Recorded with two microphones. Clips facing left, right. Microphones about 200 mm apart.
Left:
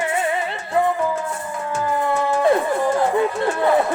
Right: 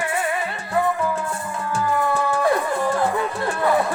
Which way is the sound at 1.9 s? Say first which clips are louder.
Left 3 dB; 20° left (ahead or behind).